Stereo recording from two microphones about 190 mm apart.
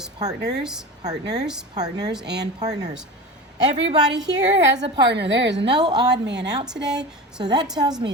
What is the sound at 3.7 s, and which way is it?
Speech, 35° right (ahead or behind).